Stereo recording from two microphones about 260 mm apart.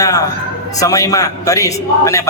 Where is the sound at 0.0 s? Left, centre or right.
Centre.